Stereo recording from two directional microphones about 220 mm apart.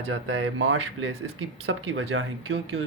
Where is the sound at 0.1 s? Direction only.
60° right (ahead or behind).